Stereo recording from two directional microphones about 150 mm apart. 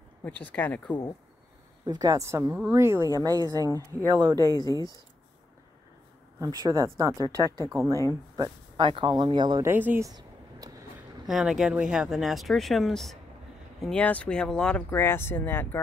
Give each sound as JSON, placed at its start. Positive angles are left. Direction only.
{"t": 0.2, "sound": "speech", "side_deg": 10}
{"t": 1.9, "sound": "speech", "side_deg": -25}
{"t": 4.4, "sound": "speech", "side_deg": 25}
{"t": 6.6, "sound": "speech", "side_deg": -20}
{"t": 9.7, "sound": "speech", "side_deg": -15}
{"t": 10.0, "sound": "a sound", "side_deg": -25}
{"t": 11.2, "sound": "speech", "side_deg": 0}